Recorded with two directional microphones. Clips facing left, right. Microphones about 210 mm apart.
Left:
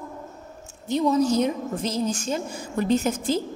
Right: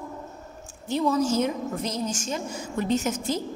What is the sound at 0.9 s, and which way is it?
Speech, 20° left (ahead or behind).